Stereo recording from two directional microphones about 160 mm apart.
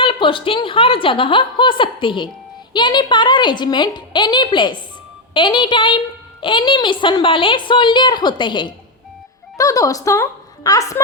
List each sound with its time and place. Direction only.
0.0 s a woman's voice: 35° left (ahead or behind)